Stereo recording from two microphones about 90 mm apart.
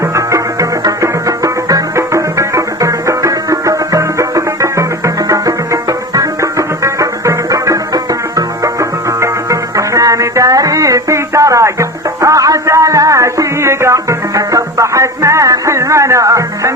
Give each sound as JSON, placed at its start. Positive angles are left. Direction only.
{"t": 0.3, "sound": "music", "side_deg": -40}